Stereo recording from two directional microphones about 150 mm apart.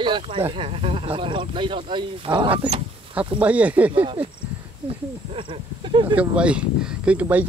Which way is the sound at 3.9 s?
35° right (ahead or behind).